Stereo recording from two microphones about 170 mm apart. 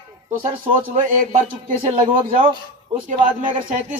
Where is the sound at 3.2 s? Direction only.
50° right (ahead or behind).